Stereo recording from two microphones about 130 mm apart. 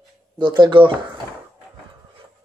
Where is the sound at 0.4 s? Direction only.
35° right (ahead or behind).